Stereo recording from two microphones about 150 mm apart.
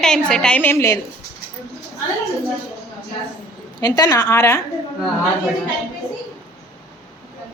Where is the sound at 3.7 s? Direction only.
25° left (ahead or behind).